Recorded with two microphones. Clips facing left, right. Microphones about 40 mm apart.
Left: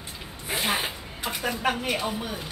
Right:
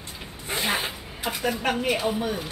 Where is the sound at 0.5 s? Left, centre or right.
Centre.